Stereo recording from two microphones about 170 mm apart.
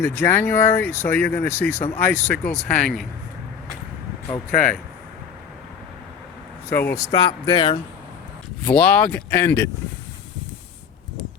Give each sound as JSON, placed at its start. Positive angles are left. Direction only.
{"t": 0.0, "sound": "speech", "side_deg": 15}
{"t": 4.3, "sound": "speech", "side_deg": 5}
{"t": 6.7, "sound": "speech", "side_deg": 10}
{"t": 6.9, "sound": "speech", "side_deg": 25}
{"t": 8.6, "sound": "speech", "side_deg": 5}